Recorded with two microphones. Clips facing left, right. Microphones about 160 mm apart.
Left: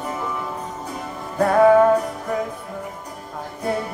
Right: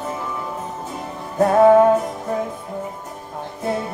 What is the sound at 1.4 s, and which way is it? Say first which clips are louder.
Music: right 2 dB; 25° right (ahead or behind).